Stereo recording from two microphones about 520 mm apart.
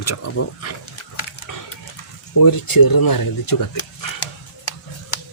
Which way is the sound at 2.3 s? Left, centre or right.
Left.